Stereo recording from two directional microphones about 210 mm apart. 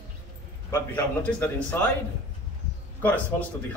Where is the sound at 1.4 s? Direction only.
10° left (ahead or behind).